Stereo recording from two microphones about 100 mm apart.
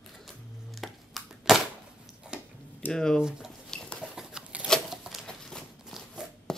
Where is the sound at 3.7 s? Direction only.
10° left (ahead or behind).